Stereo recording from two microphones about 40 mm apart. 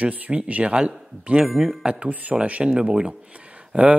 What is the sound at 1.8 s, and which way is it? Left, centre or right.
Speech, right.